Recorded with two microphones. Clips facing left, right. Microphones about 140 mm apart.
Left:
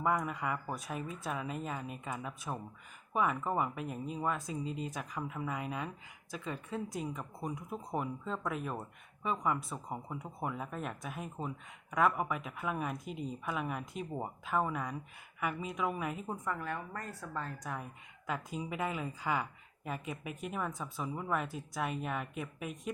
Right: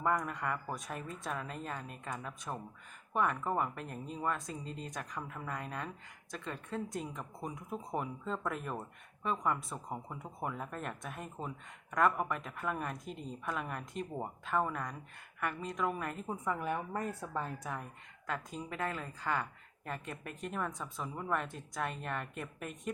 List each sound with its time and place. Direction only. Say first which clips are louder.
0.0 s speech: left 1 dB; 5° left (ahead or behind)
16.4 s a woman's voice: right 3 dB; 15° right (ahead or behind)
18.3 s speech: left 2 dB; 10° left (ahead or behind)